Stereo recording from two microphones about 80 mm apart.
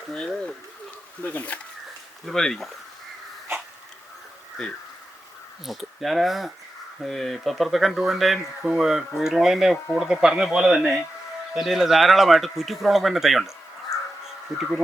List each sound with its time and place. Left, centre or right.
0.1 s speech: centre
2.2 s speech: centre
5.6 s speech: centre
14.5 s speech: centre